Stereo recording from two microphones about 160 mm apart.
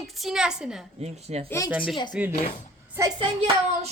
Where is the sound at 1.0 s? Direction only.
40° right (ahead or behind).